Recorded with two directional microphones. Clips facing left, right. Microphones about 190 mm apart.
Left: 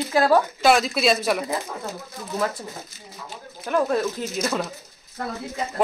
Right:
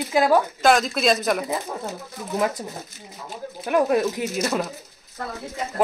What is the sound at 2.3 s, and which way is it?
Speech, 15° right (ahead or behind).